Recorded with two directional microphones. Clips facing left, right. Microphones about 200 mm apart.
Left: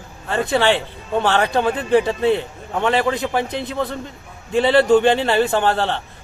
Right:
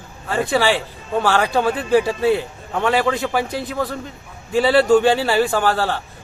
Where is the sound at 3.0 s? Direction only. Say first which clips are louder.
Even; 20° left (ahead or behind).